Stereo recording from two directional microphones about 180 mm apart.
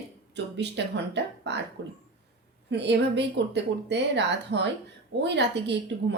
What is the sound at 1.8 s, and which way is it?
Speech, 85° right.